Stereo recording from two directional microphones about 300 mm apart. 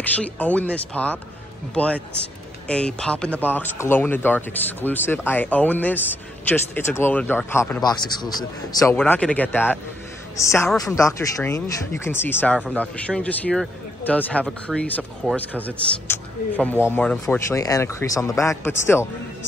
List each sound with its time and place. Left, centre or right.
0.0 s speech: centre